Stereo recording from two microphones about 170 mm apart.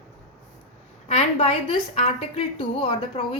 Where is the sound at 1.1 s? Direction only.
35° left (ahead or behind).